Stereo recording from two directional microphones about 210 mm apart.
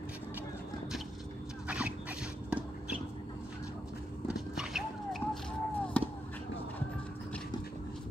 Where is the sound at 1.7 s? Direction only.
5° right (ahead or behind).